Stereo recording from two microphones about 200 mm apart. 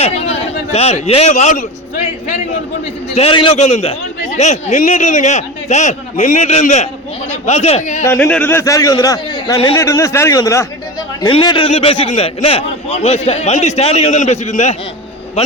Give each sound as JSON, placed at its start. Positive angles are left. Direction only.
{"t": 0.0, "sound": "a man's voice", "side_deg": 30}
{"t": 3.2, "sound": "a man's voice", "side_deg": 25}
{"t": 8.0, "sound": "a man's voice", "side_deg": 10}